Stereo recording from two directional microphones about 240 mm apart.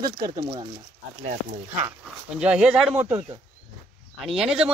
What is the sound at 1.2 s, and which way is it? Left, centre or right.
Speech, right.